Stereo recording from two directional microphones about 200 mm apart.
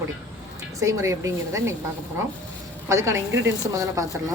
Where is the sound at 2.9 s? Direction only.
15° right (ahead or behind).